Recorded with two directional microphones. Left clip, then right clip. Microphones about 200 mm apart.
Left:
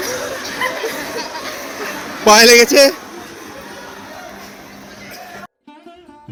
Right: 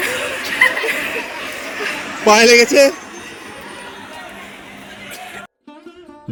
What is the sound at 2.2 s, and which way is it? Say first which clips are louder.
Speech: left 2 dB; centre (ahead or behind).